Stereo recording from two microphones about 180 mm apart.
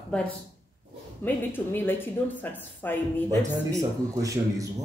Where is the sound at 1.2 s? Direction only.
10° left (ahead or behind).